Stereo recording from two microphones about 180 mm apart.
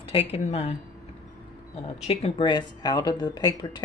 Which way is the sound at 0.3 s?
35° left (ahead or behind).